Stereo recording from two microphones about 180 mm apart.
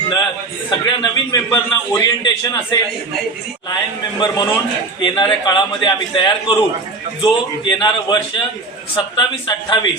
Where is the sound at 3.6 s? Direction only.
20° left (ahead or behind).